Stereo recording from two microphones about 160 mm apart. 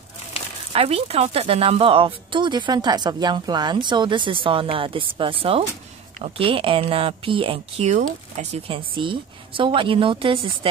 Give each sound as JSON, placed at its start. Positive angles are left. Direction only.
{"t": 0.7, "sound": "speech", "side_deg": -40}